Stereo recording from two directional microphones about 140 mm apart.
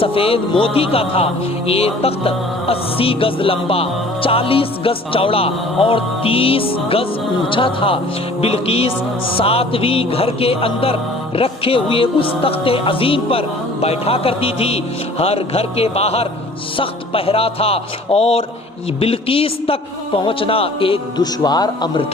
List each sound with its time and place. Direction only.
0.0 s speech: 40° left (ahead or behind)